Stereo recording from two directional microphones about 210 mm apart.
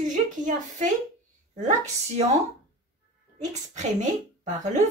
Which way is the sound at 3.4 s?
35° right (ahead or behind).